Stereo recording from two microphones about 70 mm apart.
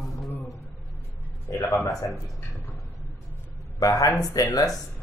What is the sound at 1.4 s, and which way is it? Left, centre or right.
Speech, left.